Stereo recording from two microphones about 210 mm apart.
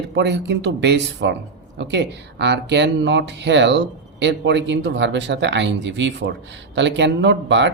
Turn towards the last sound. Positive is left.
turn(degrees=-60)  # may be behind; listen again after turning